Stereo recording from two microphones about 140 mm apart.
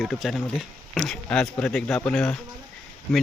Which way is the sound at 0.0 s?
Centre (ahead or behind).